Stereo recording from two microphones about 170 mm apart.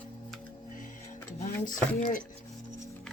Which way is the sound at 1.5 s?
50° left (ahead or behind).